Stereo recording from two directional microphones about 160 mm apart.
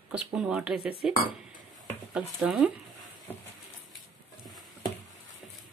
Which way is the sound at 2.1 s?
5° right (ahead or behind).